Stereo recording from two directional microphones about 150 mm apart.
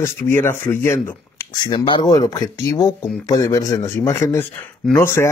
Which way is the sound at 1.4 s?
30° left (ahead or behind).